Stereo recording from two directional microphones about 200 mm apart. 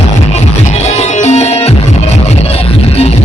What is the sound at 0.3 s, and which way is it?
Music, 35° left (ahead or behind).